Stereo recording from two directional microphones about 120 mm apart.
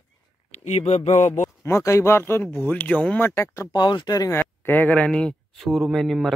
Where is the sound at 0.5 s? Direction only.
65° left (ahead or behind).